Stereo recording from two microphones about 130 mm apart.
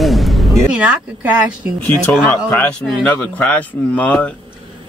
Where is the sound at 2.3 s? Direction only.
15° left (ahead or behind).